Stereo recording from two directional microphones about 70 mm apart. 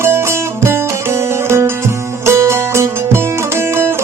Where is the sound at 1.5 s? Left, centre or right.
Right.